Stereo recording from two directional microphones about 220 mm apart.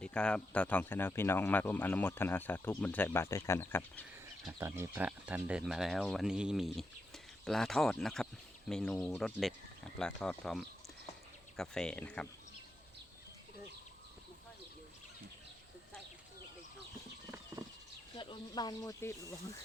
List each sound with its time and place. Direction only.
0.0 s speech: 5° left (ahead or behind)
4.6 s speech: 10° right (ahead or behind)
17.5 s a sound: 15° right (ahead or behind)
18.2 s speech: 20° left (ahead or behind)